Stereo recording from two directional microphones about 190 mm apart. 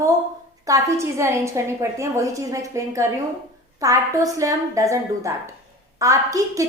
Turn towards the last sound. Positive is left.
turn(degrees=-15)  # may be behind; listen again after turning